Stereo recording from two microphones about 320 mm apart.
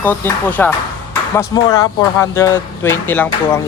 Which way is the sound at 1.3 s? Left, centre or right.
Centre.